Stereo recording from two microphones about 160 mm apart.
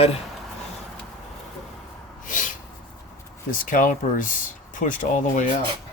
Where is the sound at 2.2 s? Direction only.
55° left (ahead or behind).